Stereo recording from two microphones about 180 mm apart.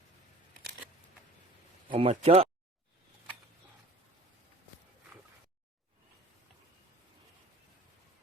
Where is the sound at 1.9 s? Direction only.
30° right (ahead or behind).